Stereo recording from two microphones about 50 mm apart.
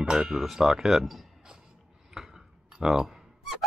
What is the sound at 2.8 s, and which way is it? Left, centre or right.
Squeak, centre.